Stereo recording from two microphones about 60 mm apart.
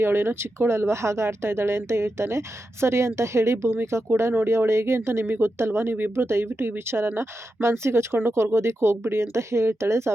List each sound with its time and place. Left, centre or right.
0.0 s speech: right